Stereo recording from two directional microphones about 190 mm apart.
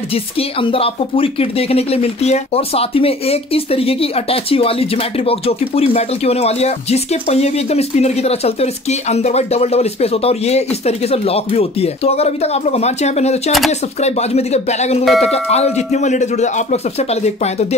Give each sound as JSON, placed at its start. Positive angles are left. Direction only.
{"t": 0.6, "sound": "speech", "side_deg": 30}